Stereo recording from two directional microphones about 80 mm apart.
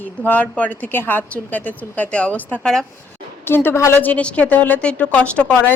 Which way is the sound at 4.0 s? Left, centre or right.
Centre.